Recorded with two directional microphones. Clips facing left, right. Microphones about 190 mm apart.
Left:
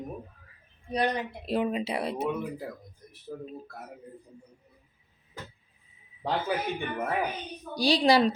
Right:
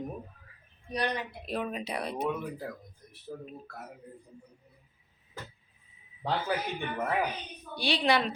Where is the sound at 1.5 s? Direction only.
25° left (ahead or behind).